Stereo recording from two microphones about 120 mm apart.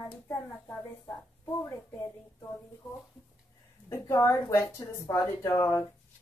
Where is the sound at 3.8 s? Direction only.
25° left (ahead or behind).